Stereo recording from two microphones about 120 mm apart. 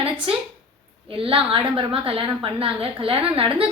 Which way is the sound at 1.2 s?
50° right (ahead or behind).